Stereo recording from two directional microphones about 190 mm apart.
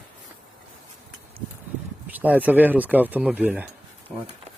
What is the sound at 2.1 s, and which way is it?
Speech, 10° right (ahead or behind).